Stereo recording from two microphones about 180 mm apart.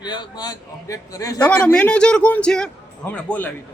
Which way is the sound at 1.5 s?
5° left (ahead or behind).